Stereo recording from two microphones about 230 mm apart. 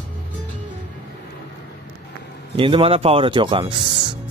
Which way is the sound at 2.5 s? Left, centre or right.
Right.